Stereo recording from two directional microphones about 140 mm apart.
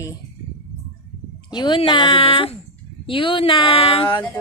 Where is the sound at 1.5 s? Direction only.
35° left (ahead or behind).